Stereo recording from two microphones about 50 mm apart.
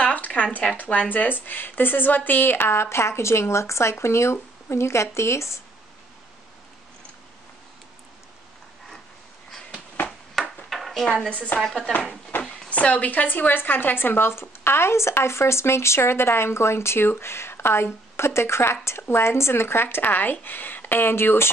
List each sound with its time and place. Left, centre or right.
0.0 s a sound: left
0.8 s a woman's voice: left
10.4 s ping: centre
10.7 s dishes: centre
12.3 s a sound: left
12.6 s speech: left